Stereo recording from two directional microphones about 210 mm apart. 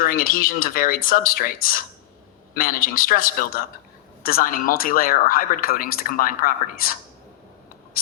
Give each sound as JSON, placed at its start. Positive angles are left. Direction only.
{"t": 0.0, "sound": "speech", "side_deg": 40}